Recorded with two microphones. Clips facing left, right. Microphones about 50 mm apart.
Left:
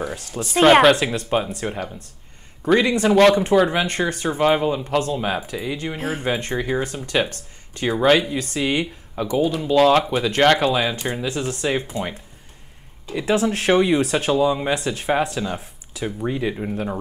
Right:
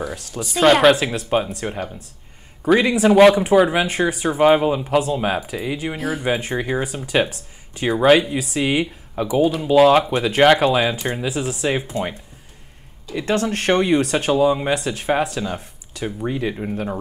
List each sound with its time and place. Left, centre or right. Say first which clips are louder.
0.0 s speech: even; centre
5.9 s speech: right 2 dB; left
6.2 s speech: right 1 dB; centre
13.1 s speech: left 1 dB; centre